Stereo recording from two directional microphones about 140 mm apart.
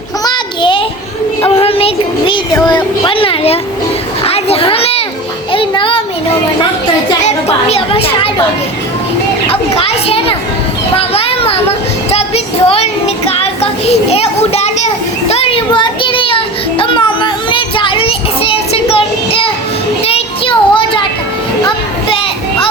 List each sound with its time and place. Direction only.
0.3 s child singing: 35° left (ahead or behind)
2.6 s speech: 35° left (ahead or behind)
4.2 s children playing: 45° left (ahead or behind)
5.5 s music: 40° left (ahead or behind)
7.2 s speech: 50° left (ahead or behind)
9.5 s a child's voice: 45° left (ahead or behind)
10.9 s children playing: 45° left (ahead or behind)
12.1 s child singing: 45° left (ahead or behind)
14.1 s a child's voice: 45° left (ahead or behind)
15.3 s child singing: 45° left (ahead or behind)
21.7 s a sound: 40° left (ahead or behind)